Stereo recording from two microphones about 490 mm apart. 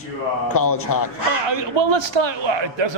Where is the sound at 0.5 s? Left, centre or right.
Left.